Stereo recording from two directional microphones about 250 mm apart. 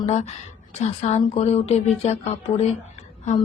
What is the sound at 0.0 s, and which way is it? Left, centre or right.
A woman's voice, left.